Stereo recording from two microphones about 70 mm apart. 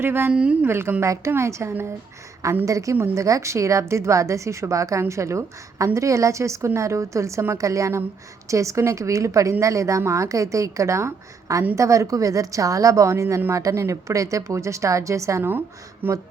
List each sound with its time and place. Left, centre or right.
0.0 s a woman's voice: right
0.3 s a woman's voice: centre
0.7 s a woman's voice: right
1.0 s a woman's voice: right
16.0 s speech: right